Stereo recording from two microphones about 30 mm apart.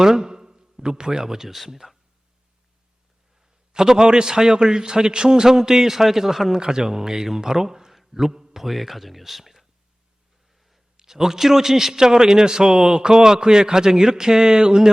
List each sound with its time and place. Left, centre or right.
0.0 s a sound: centre
1.2 s a man's voice: centre
3.7 s a man's voice: right
6.6 s a man's voice: right
8.5 s speech: centre
10.9 s a man's voice: centre